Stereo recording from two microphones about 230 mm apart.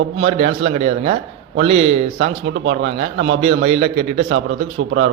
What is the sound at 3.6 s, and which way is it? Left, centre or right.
Speech, right.